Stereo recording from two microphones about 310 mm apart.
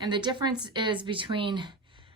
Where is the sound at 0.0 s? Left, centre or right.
Centre.